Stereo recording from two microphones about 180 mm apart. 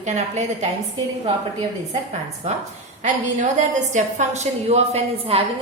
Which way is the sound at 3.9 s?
40° right (ahead or behind).